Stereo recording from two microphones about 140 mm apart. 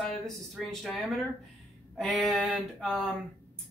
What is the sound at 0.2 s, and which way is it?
Speech, 5° left (ahead or behind).